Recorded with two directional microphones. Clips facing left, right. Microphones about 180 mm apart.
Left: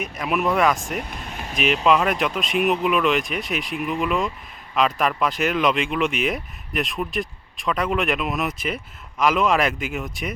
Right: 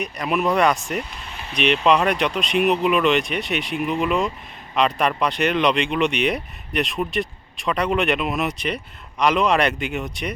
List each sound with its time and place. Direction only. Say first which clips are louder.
0.0 s speech: right 1 dB; centre (ahead or behind)
1.1 s vehicle: left 3 dB; 50° left (ahead or behind)
1.5 s speech: right 1 dB; centre (ahead or behind)